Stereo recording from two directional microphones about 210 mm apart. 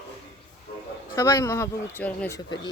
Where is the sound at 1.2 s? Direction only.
15° left (ahead or behind).